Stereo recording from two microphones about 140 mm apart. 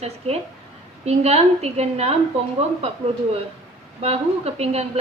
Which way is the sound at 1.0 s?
50° right (ahead or behind).